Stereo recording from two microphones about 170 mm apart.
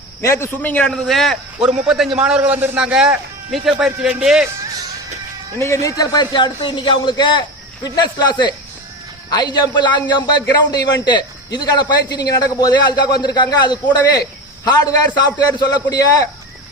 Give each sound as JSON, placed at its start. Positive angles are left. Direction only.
{"t": 0.2, "sound": "a man's voice", "side_deg": 15}
{"t": 5.5, "sound": "a man's voice", "side_deg": 15}